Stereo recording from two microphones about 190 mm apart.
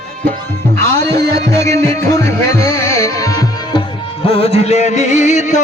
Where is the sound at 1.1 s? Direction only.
60° right (ahead or behind).